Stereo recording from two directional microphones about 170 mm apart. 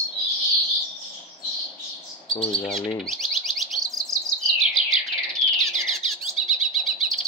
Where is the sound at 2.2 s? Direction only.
30° left (ahead or behind).